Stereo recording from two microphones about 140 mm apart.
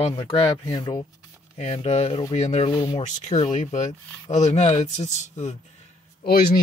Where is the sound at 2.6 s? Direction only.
35° left (ahead or behind).